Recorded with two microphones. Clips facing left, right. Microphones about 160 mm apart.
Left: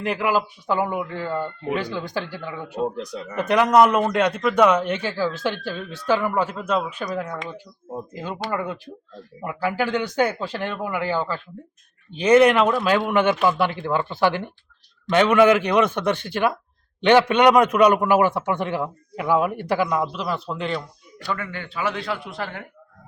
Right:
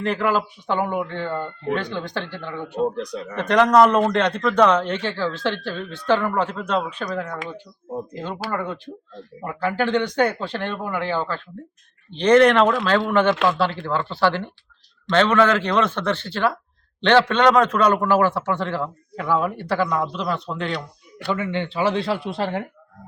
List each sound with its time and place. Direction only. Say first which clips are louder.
0.0 s speech: right 1 dB; 10° left (ahead or behind)
8.5 s speech: even; 5° left (ahead or behind)
20.7 s speech: left 1 dB; 60° right (ahead or behind)
21.3 s speech: right 7 dB; 25° right (ahead or behind)